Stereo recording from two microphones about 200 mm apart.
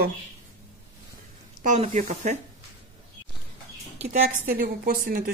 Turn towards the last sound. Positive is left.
turn(degrees=-45)  # may be behind; listen again after turning